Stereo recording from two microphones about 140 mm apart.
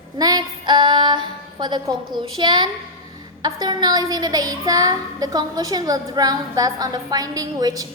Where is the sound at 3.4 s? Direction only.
30° right (ahead or behind).